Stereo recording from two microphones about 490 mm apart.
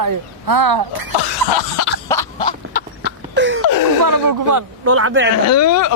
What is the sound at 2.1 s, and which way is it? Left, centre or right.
Cough, centre.